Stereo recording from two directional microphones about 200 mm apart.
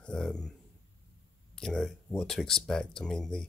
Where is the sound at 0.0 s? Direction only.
5° left (ahead or behind).